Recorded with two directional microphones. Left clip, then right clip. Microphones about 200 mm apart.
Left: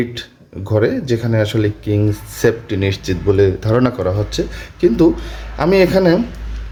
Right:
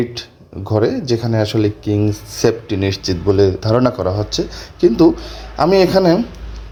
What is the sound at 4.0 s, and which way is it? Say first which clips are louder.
Speech: even; centre (ahead or behind).